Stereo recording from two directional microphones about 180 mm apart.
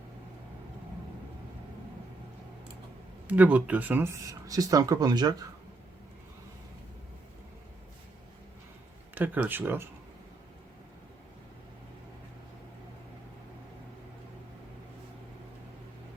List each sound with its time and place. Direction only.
3.2 s speech: 10° right (ahead or behind)
9.1 s speech: 10° right (ahead or behind)